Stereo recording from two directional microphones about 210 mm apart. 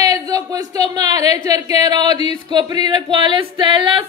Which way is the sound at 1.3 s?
15° right (ahead or behind).